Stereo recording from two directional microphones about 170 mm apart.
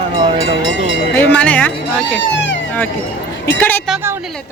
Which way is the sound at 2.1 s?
90° left.